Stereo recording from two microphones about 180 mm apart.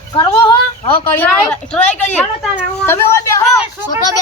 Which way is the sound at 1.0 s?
10° left (ahead or behind).